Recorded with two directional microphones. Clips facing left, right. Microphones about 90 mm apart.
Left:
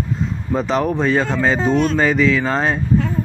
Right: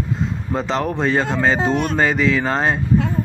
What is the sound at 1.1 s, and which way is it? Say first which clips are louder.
Speech: left 1 dB; 15° right (ahead or behind).